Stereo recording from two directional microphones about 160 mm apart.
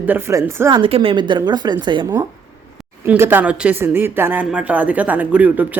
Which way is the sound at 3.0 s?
15° right (ahead or behind).